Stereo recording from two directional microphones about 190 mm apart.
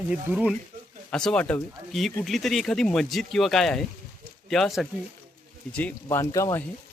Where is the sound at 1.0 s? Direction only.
5° left (ahead or behind).